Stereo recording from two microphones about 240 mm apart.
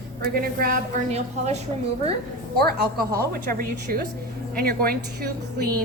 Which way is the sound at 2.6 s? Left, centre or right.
Right.